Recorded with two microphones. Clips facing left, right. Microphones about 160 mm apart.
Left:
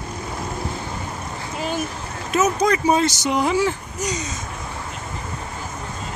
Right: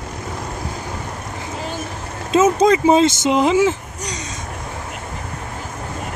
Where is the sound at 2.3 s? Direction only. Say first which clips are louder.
Right 5 dB; 25° right (ahead or behind).